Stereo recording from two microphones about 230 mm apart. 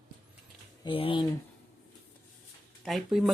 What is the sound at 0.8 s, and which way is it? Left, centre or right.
Speech, left.